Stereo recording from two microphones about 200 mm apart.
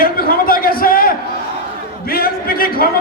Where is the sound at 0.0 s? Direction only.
45° left (ahead or behind).